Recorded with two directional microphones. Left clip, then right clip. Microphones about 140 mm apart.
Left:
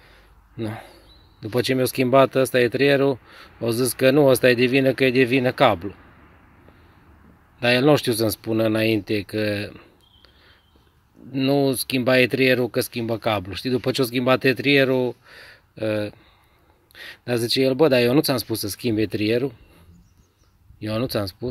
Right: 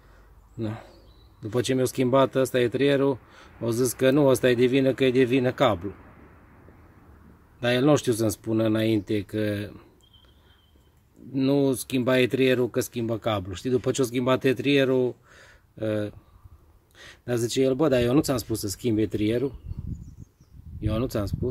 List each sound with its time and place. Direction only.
0.6 s speech: 15° left (ahead or behind)
7.6 s speech: 25° left (ahead or behind)
11.3 s speech: 20° left (ahead or behind)
20.8 s speech: 25° left (ahead or behind)